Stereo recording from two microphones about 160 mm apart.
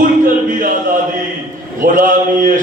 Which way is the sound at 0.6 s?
55° right (ahead or behind).